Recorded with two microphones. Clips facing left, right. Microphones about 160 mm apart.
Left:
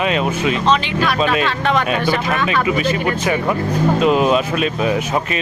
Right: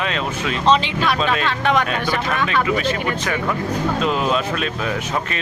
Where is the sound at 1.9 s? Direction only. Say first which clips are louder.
Left 4 dB; 15° left (ahead or behind).